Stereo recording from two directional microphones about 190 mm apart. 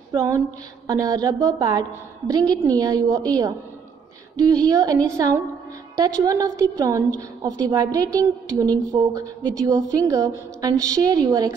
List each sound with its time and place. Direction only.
0.1 s a woman's voice: 15° right (ahead or behind)